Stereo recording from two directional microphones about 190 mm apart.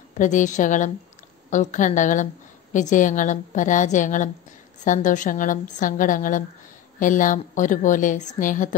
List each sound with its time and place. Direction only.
0.2 s a woman's voice: 40° left (ahead or behind)